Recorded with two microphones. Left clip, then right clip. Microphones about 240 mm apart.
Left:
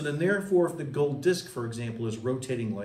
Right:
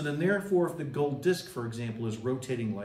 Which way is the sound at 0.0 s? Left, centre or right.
Centre.